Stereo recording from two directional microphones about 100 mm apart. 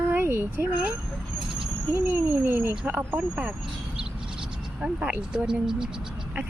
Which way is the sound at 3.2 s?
10° right (ahead or behind).